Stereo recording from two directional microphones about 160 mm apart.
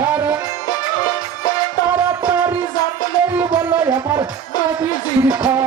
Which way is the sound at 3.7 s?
15° right (ahead or behind).